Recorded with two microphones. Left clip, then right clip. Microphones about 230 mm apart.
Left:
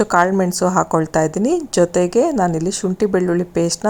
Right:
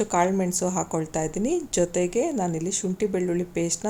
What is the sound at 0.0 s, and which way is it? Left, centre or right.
Speech, left.